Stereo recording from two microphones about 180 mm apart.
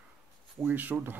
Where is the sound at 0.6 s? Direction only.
10° right (ahead or behind).